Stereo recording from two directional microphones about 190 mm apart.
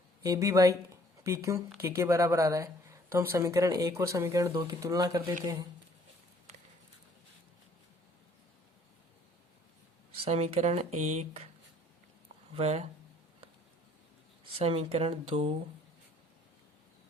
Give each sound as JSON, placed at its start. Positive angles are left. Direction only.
{"t": 0.2, "sound": "a woman's voice", "side_deg": -15}
{"t": 10.2, "sound": "speech", "side_deg": -35}
{"t": 12.5, "sound": "speech", "side_deg": -35}
{"t": 14.4, "sound": "speech", "side_deg": -30}